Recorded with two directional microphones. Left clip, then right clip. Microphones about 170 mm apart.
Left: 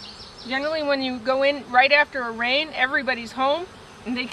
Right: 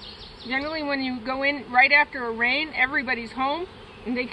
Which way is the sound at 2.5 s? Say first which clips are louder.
Left 3 dB; 25° left (ahead or behind).